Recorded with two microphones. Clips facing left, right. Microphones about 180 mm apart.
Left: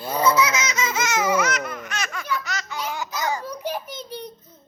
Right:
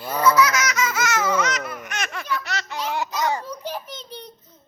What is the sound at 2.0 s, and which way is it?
Baby laughter, 30° right (ahead or behind).